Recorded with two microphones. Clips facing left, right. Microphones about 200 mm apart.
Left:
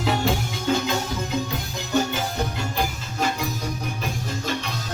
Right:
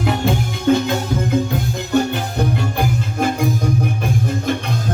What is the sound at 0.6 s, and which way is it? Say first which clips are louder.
Music: right 8 dB; 60° right (ahead or behind).